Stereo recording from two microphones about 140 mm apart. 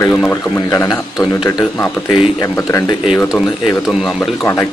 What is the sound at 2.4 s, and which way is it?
Speech, 20° left (ahead or behind).